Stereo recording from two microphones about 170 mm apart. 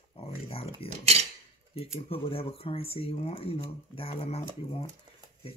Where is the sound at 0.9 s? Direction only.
40° right (ahead or behind).